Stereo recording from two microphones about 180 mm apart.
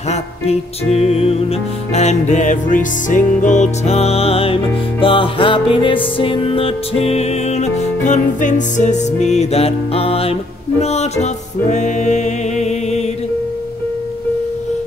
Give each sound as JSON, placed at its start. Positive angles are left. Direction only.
{"t": 0.1, "sound": "music", "side_deg": 35}